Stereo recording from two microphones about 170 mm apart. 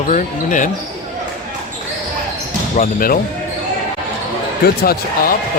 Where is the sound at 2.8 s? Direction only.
55° left (ahead or behind).